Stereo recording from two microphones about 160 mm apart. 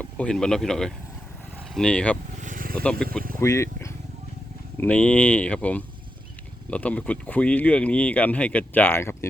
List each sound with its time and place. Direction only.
0.0 s speech: 5° left (ahead or behind)
2.4 s vehicle: 55° right (ahead or behind)
3.4 s speech: 20° left (ahead or behind)
4.8 s speech: 10° left (ahead or behind)